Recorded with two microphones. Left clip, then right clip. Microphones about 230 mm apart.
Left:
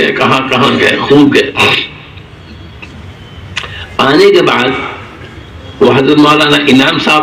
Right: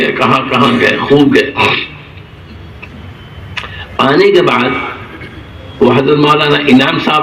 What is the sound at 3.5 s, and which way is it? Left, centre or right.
Camera, left.